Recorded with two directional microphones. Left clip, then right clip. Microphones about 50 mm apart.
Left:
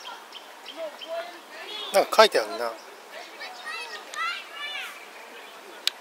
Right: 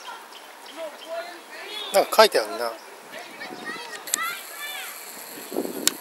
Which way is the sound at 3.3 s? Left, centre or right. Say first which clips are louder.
Even; left.